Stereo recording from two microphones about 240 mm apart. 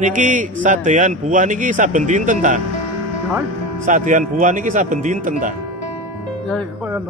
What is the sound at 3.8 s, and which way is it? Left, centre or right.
Speech, right.